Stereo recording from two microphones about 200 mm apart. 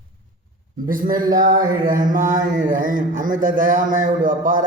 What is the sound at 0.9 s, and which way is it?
Speech, 45° right (ahead or behind).